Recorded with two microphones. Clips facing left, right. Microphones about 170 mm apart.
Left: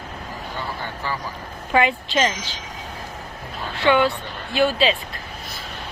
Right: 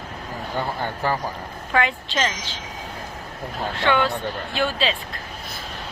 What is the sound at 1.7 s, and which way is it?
Speech, 15° left (ahead or behind).